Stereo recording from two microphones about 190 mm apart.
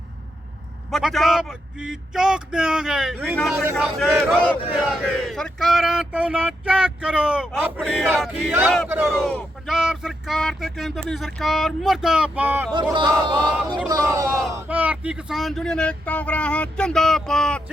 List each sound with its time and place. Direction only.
0.9 s a man's voice: centre (ahead or behind)
3.8 s speech: 5° left (ahead or behind)
12.7 s speech: 25° right (ahead or behind); by 17.6 s 5° left (ahead or behind)